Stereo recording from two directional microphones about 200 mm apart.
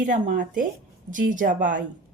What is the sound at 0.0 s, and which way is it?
Speech, 40° right (ahead or behind).